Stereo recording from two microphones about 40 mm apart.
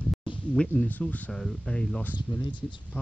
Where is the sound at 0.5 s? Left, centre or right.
Left.